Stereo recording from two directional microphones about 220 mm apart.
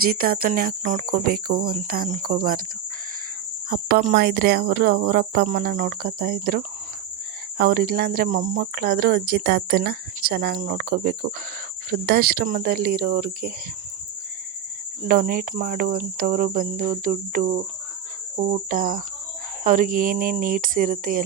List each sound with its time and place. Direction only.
0.0 s cricket: 40° right (ahead or behind)
3.7 s speech: 40° right (ahead or behind)
15.0 s cricket: 40° right (ahead or behind)